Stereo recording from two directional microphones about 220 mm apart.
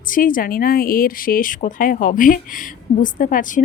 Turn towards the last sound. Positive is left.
turn(degrees=40)  # may be behind; listen again after turning